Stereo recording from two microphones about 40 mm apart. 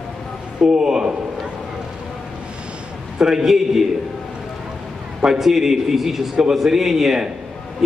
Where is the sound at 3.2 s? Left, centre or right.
Centre.